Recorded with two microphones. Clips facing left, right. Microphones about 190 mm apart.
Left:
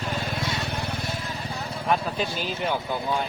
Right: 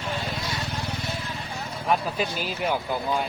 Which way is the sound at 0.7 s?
60° left (ahead or behind).